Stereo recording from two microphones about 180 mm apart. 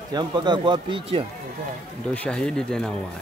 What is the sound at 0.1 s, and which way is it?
Speech, 25° right (ahead or behind).